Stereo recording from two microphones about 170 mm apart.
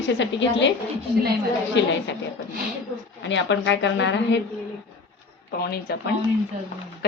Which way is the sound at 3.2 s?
90° left.